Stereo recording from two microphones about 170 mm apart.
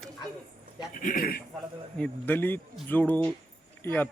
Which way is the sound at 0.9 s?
55° left (ahead or behind).